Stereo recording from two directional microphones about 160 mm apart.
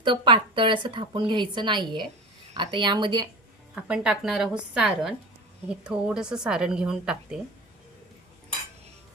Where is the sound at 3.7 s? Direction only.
5° right (ahead or behind).